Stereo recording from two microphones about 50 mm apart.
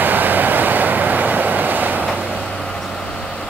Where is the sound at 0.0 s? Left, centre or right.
Right.